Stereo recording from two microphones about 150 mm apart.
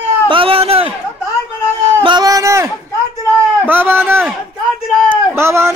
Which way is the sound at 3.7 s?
15° right (ahead or behind).